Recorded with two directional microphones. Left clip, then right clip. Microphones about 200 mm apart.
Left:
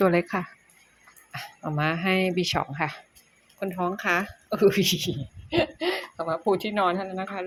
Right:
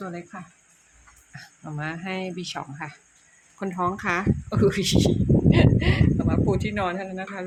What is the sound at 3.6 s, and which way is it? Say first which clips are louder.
Speech: right 1 dB; centre (ahead or behind).